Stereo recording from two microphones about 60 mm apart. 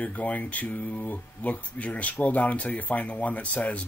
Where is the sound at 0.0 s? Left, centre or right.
Left.